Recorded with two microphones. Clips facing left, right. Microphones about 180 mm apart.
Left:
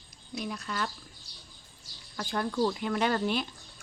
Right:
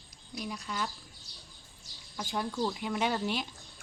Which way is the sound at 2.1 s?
10° right (ahead or behind).